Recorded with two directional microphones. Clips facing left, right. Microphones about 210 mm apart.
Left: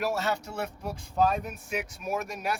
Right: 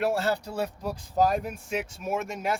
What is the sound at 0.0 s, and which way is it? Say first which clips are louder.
Speech: right 3 dB; 30° right (ahead or behind).